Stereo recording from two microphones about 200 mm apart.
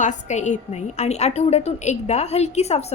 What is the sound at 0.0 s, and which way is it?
A woman's voice, 35° left (ahead or behind).